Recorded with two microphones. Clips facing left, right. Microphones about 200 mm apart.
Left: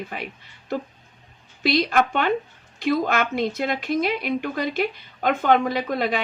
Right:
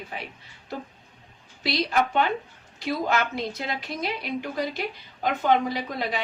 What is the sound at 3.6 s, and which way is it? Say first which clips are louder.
A woman's voice: left 8 dB; 55° left (ahead or behind).